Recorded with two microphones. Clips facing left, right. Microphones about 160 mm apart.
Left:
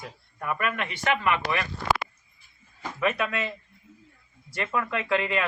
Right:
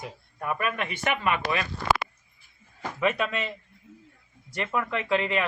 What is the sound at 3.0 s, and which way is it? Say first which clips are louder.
Speech: even; 20° right (ahead or behind).